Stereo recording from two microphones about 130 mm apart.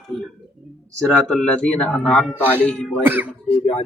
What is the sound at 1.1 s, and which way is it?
Speech, 5° left (ahead or behind).